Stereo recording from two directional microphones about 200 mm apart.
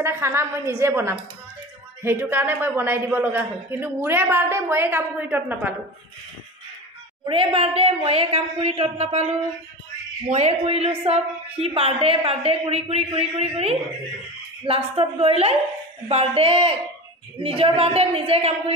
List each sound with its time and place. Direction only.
0.0 s a man's voice: 15° right (ahead or behind)
7.2 s a woman's voice: 25° right (ahead or behind)
10.3 s a woman's voice: 30° right (ahead or behind)